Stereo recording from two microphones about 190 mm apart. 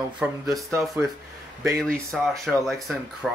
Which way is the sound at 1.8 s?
5° left (ahead or behind).